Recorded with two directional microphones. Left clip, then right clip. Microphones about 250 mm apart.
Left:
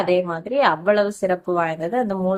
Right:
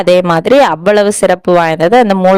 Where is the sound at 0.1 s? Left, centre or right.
Right.